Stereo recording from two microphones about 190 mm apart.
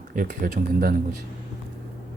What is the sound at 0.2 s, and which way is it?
Speech, 45° right (ahead or behind).